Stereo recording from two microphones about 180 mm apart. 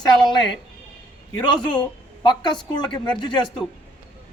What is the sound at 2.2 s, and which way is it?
Speech, 25° left (ahead or behind).